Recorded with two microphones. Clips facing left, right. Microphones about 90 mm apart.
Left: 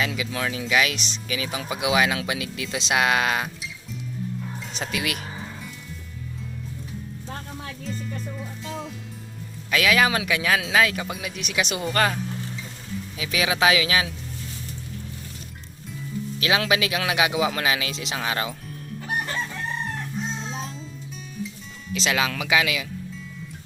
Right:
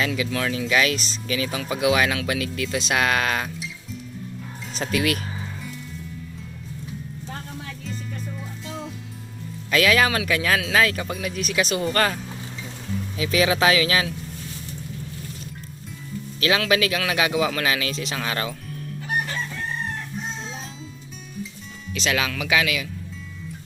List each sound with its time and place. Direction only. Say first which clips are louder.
0.0 s speech: right 2 dB; 10° left (ahead or behind)
4.8 s speech: right 6 dB; 10° left (ahead or behind)
7.9 s music: left 2 dB; centre (ahead or behind)
9.6 s speech: right 1 dB; 5° left (ahead or behind)
16.4 s speech: right 2 dB; 20° left (ahead or behind)
21.9 s speech: even; 25° left (ahead or behind)